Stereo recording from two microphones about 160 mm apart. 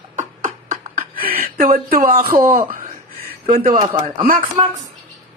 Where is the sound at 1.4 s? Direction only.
65° right (ahead or behind).